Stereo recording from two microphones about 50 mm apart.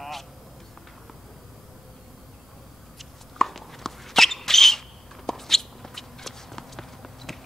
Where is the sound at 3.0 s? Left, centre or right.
Centre.